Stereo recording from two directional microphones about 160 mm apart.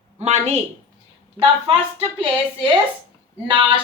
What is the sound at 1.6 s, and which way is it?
Speech, 35° right (ahead or behind).